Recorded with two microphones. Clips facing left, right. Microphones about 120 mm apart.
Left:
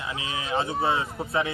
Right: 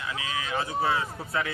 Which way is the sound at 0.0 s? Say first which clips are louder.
Even; 25° left (ahead or behind).